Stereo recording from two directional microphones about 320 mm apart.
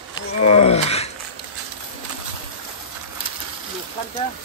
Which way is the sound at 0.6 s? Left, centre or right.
Centre.